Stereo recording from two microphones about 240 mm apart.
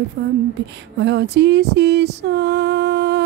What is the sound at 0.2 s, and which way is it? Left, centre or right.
Speech, right.